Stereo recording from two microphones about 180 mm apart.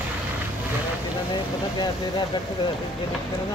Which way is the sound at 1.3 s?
25° left (ahead or behind).